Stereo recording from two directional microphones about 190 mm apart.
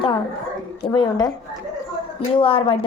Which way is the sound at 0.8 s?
20° left (ahead or behind).